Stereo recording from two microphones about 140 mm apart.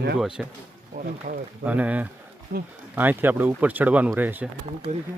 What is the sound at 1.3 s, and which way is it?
Speech, 60° right (ahead or behind).